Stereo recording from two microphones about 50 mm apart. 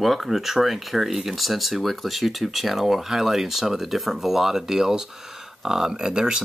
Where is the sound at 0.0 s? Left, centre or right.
Centre.